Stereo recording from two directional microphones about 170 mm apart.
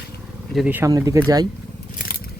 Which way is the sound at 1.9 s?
60° left (ahead or behind).